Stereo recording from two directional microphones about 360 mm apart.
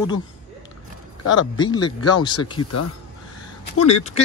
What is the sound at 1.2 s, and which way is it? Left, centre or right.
Speech, left.